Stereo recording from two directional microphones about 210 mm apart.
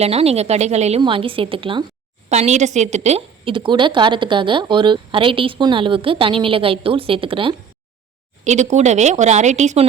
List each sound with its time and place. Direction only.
0.0 s a woman's voice: 30° right (ahead or behind)